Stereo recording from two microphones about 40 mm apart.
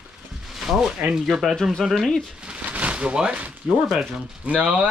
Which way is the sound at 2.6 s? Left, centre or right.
Right.